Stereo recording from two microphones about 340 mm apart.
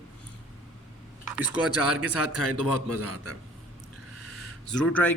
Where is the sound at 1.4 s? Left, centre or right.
Left.